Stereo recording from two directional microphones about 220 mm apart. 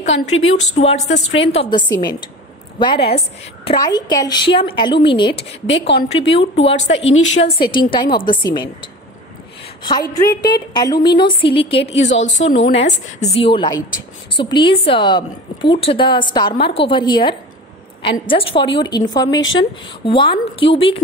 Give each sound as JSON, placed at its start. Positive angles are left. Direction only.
{"t": 0.7, "sound": "a woman's voice", "side_deg": 30}
{"t": 5.7, "sound": "speech", "side_deg": 50}
{"t": 6.0, "sound": "a woman's voice", "side_deg": 25}
{"t": 11.8, "sound": "speech", "side_deg": 55}
{"t": 12.4, "sound": "a woman's voice", "side_deg": 30}